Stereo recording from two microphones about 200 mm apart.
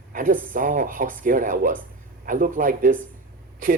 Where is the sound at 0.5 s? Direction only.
40° right (ahead or behind).